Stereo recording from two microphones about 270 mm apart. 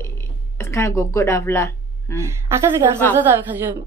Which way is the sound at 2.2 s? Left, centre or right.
Centre.